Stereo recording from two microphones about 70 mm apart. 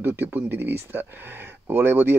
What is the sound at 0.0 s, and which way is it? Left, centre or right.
Speech, right.